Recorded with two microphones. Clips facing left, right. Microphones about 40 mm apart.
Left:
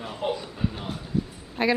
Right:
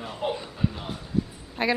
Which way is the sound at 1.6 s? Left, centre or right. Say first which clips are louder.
Left 2 dB; centre.